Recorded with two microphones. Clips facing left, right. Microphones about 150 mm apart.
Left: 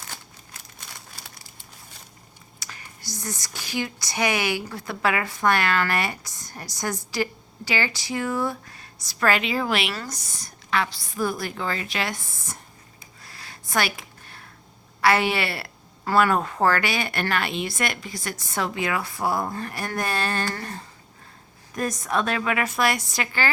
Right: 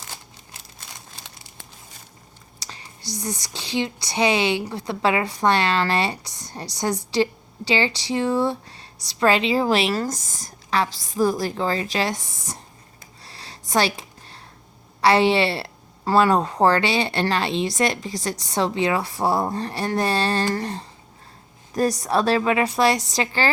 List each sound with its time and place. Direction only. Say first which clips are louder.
1.1 s crumpling: right 1 dB; 20° right (ahead or behind)
2.6 s whispering: right 2 dB; 35° right (ahead or behind)
3.4 s a woman's voice: right 3 dB; 25° right (ahead or behind)
13.2 s a sound: right 3 dB; 30° right (ahead or behind)
15.0 s a woman's voice: right 4 dB; 30° right (ahead or behind)